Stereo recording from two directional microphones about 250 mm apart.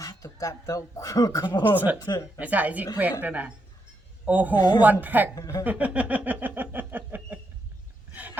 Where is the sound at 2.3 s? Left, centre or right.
Centre.